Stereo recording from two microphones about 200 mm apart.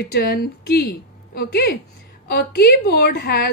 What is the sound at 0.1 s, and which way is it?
A woman's voice, 50° left (ahead or behind).